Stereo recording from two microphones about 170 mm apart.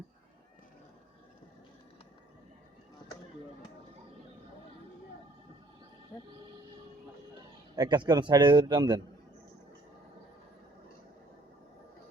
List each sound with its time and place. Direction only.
7.8 s a man's voice: 25° right (ahead or behind)